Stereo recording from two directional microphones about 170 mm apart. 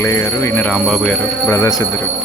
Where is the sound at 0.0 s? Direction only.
15° left (ahead or behind).